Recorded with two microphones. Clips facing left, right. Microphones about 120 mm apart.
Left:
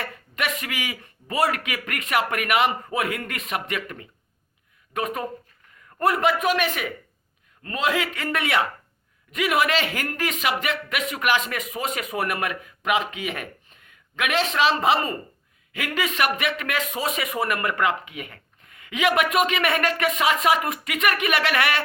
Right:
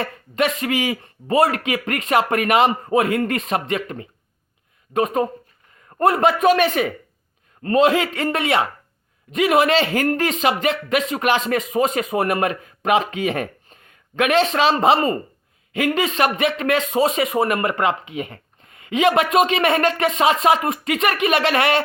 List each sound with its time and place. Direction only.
0.0 s a man's voice: 30° right (ahead or behind)